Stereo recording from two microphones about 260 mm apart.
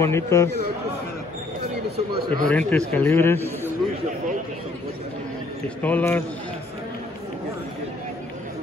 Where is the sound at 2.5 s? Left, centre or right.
Centre.